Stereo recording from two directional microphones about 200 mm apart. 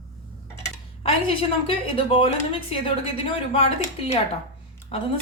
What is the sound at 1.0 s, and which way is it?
A woman's voice, 30° left (ahead or behind).